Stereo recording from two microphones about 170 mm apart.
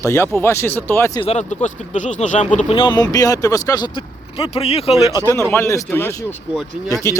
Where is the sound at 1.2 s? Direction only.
40° left (ahead or behind).